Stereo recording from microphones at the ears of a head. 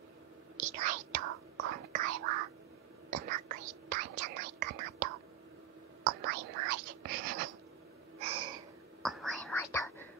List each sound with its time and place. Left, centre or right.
0.6 s whispering: right
8.2 s a sound: right
9.0 s whispering: centre